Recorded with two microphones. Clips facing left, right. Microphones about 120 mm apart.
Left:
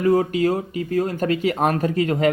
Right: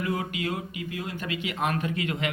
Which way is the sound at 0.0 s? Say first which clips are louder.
Left 12 dB; 35° left (ahead or behind).